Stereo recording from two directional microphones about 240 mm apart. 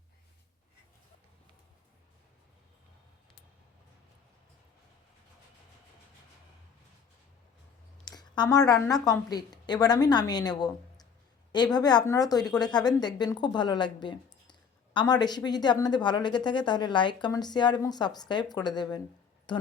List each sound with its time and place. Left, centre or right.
8.0 s a woman's voice: centre